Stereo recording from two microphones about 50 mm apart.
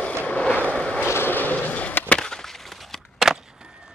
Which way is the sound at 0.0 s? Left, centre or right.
Left.